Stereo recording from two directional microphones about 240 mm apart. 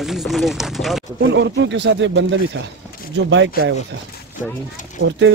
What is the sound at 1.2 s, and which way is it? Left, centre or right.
Speech, right.